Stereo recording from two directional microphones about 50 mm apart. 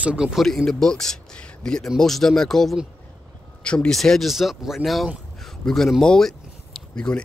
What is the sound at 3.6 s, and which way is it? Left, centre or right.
Speech, centre.